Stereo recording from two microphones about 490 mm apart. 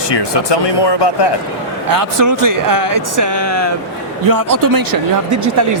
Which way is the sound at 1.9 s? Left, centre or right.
Right.